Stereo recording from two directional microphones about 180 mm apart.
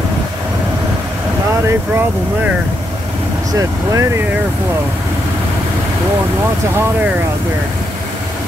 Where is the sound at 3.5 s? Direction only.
20° right (ahead or behind).